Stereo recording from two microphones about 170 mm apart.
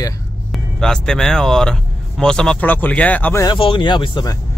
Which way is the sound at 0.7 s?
5° left (ahead or behind).